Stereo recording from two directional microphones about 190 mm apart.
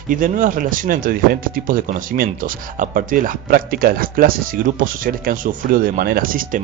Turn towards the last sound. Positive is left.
turn(degrees=-45)  # may be behind; listen again after turning